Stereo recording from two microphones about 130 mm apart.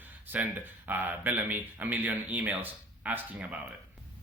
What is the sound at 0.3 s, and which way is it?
Speech, 15° right (ahead or behind).